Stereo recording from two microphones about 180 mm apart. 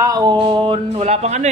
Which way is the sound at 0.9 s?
35° right (ahead or behind).